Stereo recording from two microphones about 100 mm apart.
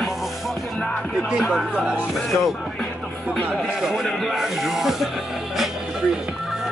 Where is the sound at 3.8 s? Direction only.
5° right (ahead or behind).